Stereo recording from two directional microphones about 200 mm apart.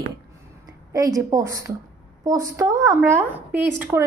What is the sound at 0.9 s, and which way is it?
A woman's voice, 15° right (ahead or behind).